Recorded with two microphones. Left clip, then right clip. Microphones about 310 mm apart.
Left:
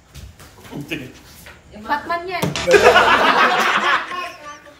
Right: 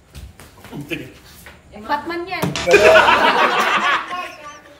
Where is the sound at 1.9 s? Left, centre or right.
Centre.